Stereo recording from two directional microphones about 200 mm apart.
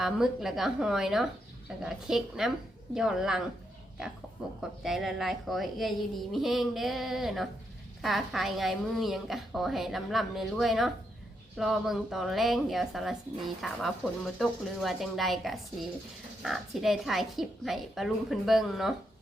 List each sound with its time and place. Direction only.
0.0 s a woman's voice: centre (ahead or behind)